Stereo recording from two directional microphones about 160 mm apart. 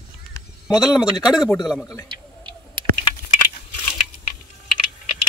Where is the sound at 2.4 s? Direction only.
30° right (ahead or behind).